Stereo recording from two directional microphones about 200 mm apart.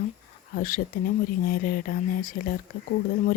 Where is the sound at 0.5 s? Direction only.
45° left (ahead or behind).